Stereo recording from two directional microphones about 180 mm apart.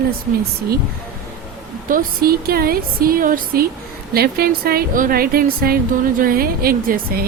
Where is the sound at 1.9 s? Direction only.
55° right (ahead or behind).